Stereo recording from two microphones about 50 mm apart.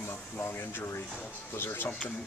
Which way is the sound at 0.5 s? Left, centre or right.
Left.